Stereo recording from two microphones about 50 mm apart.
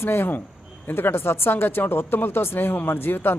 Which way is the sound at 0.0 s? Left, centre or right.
Left.